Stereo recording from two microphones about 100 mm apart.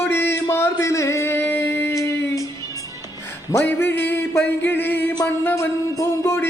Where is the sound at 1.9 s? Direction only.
30° left (ahead or behind).